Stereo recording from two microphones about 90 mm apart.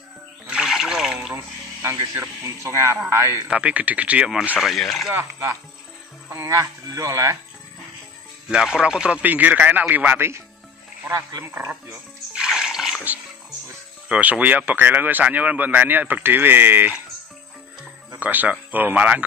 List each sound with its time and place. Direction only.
0.5 s trickle: 5° right (ahead or behind)
1.3 s speech: 30° right (ahead or behind)
3.4 s a man's voice: 15° right (ahead or behind); by 5.1 s centre (ahead or behind)
5.1 s speech: 30° right (ahead or behind)
8.5 s a man's voice: 10° right (ahead or behind); by 10.4 s 25° right (ahead or behind)
11.4 s speech: 25° right (ahead or behind)
12.4 s music: 5° right (ahead or behind)
14.0 s speech: 15° right (ahead or behind)
18.2 s speech: 20° right (ahead or behind)